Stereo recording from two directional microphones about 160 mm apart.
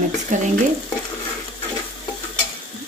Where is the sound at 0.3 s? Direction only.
50° right (ahead or behind).